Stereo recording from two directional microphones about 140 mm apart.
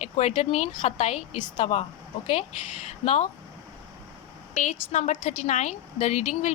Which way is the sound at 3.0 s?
50° left (ahead or behind).